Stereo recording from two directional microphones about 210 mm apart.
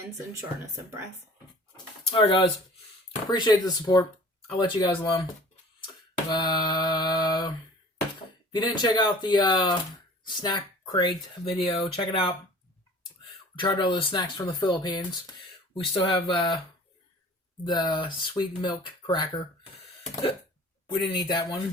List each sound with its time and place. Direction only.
1.7 s a sound: 25° left (ahead or behind)
3.2 s speech: 20° left (ahead or behind)
6.3 s mantra: 20° left (ahead or behind)
8.5 s speech: 20° left (ahead or behind)
13.6 s speech: 20° left (ahead or behind)
17.6 s speech: 20° left (ahead or behind)
20.8 s speech: 20° left (ahead or behind)